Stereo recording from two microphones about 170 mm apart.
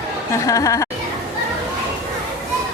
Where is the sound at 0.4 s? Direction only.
20° left (ahead or behind).